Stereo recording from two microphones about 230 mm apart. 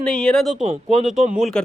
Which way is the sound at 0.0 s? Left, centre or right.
Centre.